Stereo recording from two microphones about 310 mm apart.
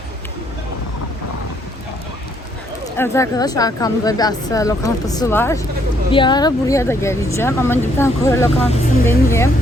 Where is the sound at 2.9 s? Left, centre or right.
Centre.